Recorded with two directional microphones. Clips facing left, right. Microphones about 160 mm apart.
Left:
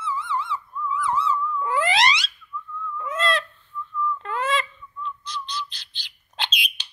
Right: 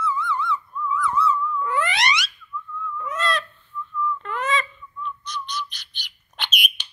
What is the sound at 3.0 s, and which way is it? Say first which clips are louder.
Goose: left 1 dB; 25° left (ahead or behind).